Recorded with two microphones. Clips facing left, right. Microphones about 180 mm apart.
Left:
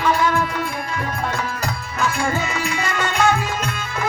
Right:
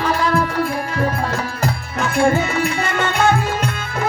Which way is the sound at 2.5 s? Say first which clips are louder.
Right 4 dB; 55° right (ahead or behind).